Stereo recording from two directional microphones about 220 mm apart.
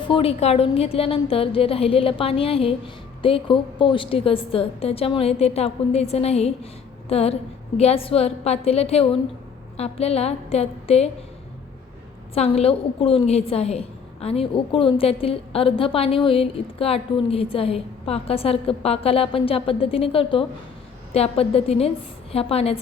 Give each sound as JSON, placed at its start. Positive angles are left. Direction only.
{"t": 0.0, "sound": "a woman's voice", "side_deg": 25}
{"t": 12.3, "sound": "a woman's voice", "side_deg": 25}